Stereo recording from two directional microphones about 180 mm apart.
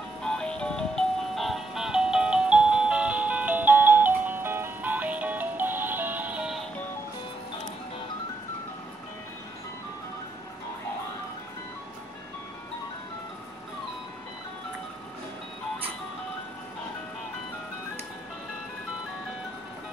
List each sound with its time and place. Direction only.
0.2 s music: 5° left (ahead or behind)